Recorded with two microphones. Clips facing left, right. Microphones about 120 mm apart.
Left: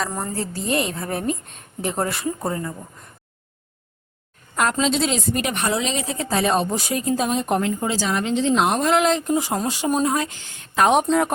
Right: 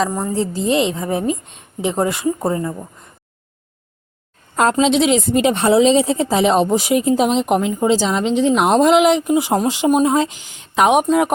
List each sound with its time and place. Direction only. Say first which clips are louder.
0.1 s speech: right 7 dB; 10° right (ahead or behind)
4.7 s speech: right 9 dB; 15° right (ahead or behind)